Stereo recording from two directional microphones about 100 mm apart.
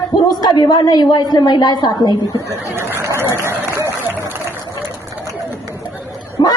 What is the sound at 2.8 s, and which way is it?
Speech, 25° right (ahead or behind).